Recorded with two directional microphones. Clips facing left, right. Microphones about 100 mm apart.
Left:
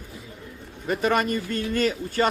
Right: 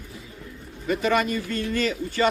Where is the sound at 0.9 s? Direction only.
45° left (ahead or behind).